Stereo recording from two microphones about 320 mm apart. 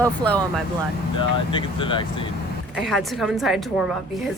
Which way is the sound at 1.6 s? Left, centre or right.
Centre.